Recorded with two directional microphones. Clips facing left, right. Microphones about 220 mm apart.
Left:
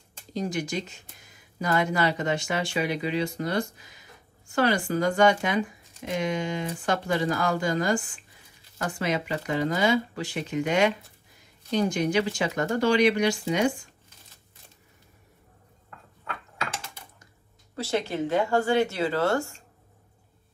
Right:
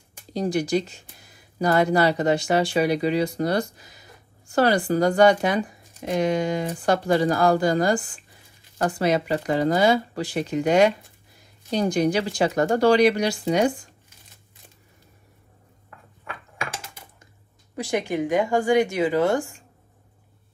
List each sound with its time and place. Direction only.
0.3 s speech: 35° right (ahead or behind)
17.7 s speech: 15° right (ahead or behind)